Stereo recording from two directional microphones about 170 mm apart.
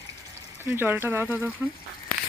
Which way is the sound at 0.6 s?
10° right (ahead or behind).